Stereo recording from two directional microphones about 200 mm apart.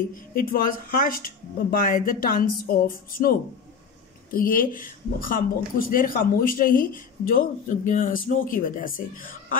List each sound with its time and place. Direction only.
0.1 s speech: 45° left (ahead or behind)